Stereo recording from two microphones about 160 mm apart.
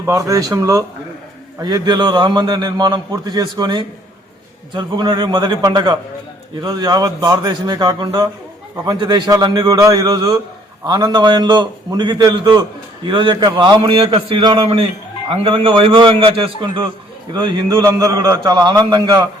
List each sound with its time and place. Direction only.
0.0 s a man's voice: 20° right (ahead or behind)
18.0 s a man's voice: 20° right (ahead or behind)